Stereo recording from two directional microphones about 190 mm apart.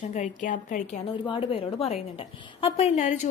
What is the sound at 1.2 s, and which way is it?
A woman's voice, 30° left (ahead or behind).